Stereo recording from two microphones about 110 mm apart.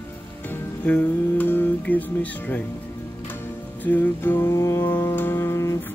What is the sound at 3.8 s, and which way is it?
Music, 15° left (ahead or behind).